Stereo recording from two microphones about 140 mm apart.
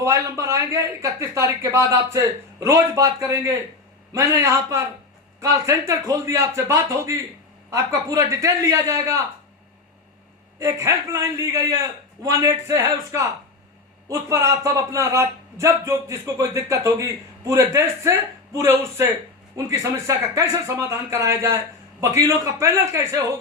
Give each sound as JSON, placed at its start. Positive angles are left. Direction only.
{"t": 0.0, "sound": "a man's voice", "side_deg": -20}
{"t": 10.6, "sound": "a man's voice", "side_deg": -20}